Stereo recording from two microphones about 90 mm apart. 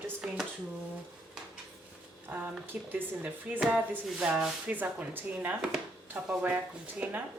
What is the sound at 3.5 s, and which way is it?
Speech, 10° right (ahead or behind).